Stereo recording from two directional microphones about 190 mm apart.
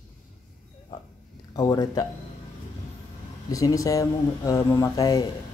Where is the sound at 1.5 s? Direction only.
20° left (ahead or behind).